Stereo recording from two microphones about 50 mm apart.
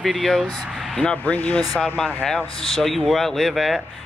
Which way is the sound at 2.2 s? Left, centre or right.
Centre.